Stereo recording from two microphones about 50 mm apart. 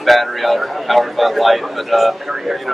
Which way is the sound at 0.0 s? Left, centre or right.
Centre.